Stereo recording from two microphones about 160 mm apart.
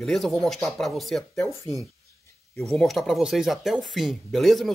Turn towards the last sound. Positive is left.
turn(degrees=0)  # may be behind; listen again after turning